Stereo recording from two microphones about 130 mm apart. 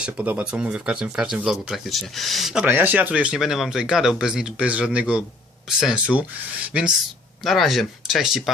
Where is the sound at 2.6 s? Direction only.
15° right (ahead or behind).